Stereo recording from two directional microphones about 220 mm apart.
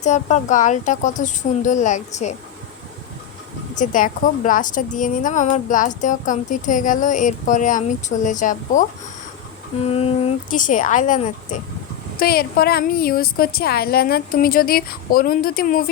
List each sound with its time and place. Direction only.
0.0 s a woman's voice: 30° left (ahead or behind)
3.8 s a woman's voice: 35° left (ahead or behind)
10.5 s a woman's voice: 35° left (ahead or behind)